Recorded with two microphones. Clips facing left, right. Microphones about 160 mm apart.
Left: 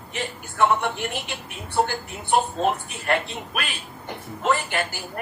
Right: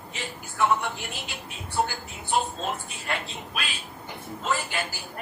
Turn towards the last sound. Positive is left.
turn(degrees=65)  # may be behind; listen again after turning